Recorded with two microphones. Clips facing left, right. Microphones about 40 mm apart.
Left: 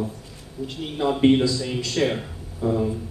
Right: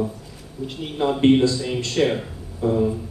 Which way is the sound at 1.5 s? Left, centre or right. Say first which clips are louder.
Right 2 dB; right.